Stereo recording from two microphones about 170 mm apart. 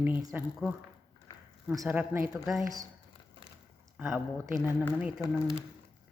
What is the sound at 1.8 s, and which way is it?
Speech, 5° right (ahead or behind).